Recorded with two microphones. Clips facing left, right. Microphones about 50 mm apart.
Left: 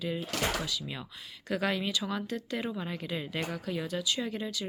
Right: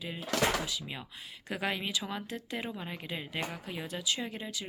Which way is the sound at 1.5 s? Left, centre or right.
Right.